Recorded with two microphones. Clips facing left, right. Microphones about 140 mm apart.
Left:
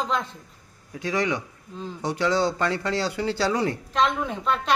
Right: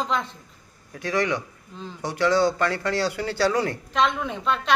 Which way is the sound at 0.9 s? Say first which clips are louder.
Right 1 dB; 15° left (ahead or behind).